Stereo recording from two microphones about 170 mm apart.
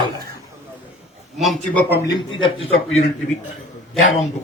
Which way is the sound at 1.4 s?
Centre (ahead or behind).